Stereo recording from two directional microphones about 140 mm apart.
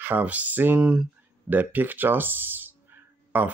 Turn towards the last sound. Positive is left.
turn(degrees=-15)  # may be behind; listen again after turning